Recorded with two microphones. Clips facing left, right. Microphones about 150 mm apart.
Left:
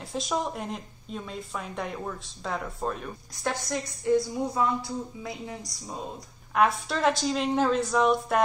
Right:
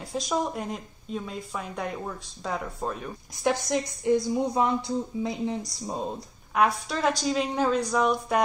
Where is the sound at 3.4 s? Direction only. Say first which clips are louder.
Right 5 dB; 20° right (ahead or behind).